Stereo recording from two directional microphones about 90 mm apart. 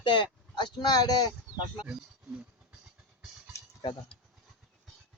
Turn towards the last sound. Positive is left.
turn(degrees=5)  # may be behind; listen again after turning